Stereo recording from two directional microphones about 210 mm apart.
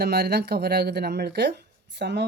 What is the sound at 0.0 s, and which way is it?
Speech, 50° right (ahead or behind).